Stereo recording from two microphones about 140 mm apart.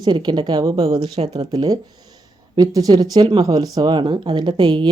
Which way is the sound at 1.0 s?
45° right (ahead or behind).